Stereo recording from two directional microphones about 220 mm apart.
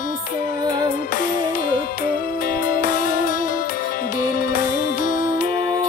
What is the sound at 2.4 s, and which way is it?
Music, 40° left (ahead or behind).